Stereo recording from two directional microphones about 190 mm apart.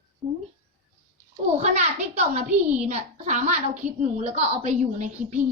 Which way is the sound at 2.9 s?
40° right (ahead or behind).